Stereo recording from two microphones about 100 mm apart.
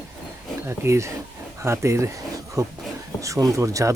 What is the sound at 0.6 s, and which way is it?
Speech, 25° right (ahead or behind).